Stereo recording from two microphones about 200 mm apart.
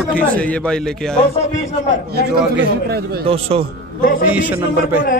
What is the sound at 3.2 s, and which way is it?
Speech, 30° right (ahead or behind).